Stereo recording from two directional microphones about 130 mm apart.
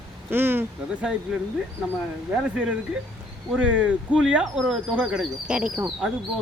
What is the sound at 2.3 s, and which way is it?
Speech, 10° right (ahead or behind).